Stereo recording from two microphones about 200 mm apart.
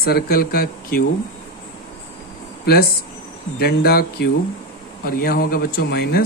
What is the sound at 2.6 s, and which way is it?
Speech, 50° left (ahead or behind).